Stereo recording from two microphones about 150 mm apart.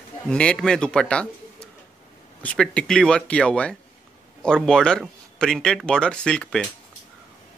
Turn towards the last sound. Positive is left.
turn(degrees=5)  # may be behind; listen again after turning